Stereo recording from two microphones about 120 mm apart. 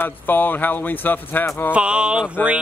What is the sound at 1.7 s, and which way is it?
Speech, 10° right (ahead or behind).